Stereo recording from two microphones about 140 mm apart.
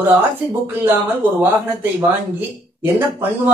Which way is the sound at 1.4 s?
15° right (ahead or behind).